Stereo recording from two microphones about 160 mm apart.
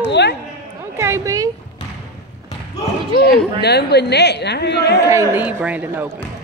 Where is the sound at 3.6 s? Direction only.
90° left.